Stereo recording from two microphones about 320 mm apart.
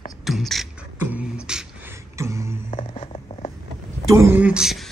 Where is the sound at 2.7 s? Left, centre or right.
Centre.